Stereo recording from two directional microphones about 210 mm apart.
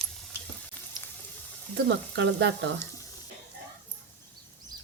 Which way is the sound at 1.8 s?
55° right (ahead or behind).